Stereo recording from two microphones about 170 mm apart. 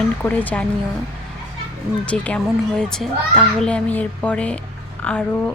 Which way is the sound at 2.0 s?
5° left (ahead or behind).